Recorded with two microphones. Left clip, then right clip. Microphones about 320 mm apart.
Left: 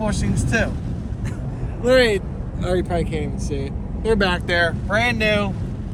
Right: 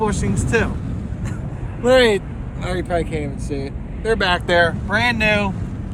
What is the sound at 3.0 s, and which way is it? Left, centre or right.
Speech, right.